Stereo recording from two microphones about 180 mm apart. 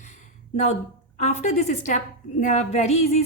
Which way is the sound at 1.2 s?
40° left (ahead or behind).